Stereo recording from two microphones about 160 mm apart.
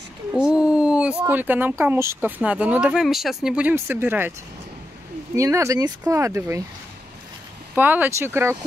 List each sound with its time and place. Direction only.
0.3 s a sound: 5° right (ahead or behind)
1.2 s speech: 10° right (ahead or behind)
5.3 s speech: 20° right (ahead or behind)
7.7 s speech: 10° right (ahead or behind)